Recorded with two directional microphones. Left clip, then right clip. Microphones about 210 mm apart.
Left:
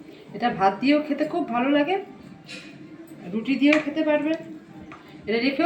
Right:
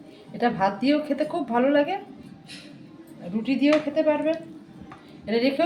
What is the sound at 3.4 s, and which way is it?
A woman's voice, 50° right (ahead or behind).